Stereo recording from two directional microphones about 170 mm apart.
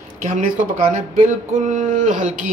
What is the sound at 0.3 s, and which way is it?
Speech, 45° right (ahead or behind).